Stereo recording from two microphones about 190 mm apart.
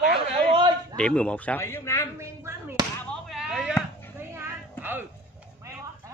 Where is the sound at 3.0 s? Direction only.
Centre (ahead or behind).